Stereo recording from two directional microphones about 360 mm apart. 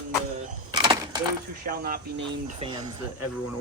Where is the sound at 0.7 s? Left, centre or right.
Centre.